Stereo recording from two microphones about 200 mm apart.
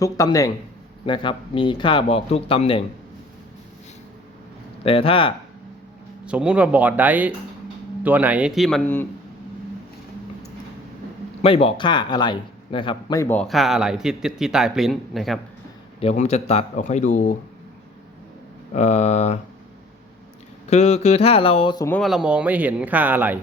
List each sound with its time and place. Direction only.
0.0 s speech: 15° left (ahead or behind)
4.8 s speech: 30° left (ahead or behind)
6.2 s speech: 5° right (ahead or behind)
11.4 s speech: 25° left (ahead or behind); by 15.4 s centre (ahead or behind)
16.0 s speech: 30° left (ahead or behind)
18.7 s speech: 35° left (ahead or behind)
20.7 s speech: 35° left (ahead or behind)
21.8 s speech: 5° left (ahead or behind)